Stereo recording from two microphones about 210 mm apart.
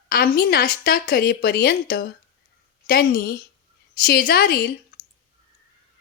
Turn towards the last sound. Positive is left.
turn(degrees=45)  # may be behind; listen again after turning